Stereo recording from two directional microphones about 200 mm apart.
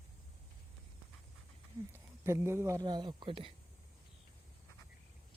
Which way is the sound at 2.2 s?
10° right (ahead or behind).